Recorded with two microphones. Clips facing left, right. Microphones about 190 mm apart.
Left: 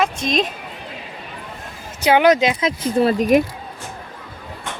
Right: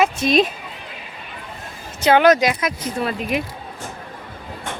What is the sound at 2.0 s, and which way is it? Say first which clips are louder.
Speech: even; 15° left (ahead or behind).